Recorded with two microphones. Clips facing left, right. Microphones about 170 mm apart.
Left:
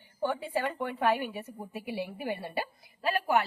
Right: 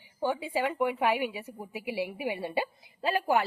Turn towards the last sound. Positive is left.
turn(degrees=-25)  # may be behind; listen again after turning